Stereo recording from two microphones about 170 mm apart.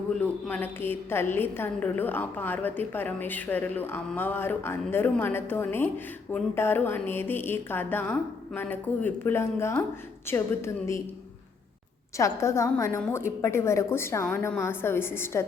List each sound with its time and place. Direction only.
0.2 s a woman's voice: 10° left (ahead or behind)
12.1 s a woman's voice: 15° left (ahead or behind)